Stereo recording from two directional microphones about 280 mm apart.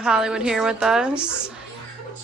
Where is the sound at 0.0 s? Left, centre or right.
Centre.